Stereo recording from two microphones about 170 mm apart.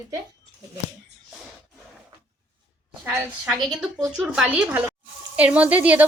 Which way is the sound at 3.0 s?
5° right (ahead or behind).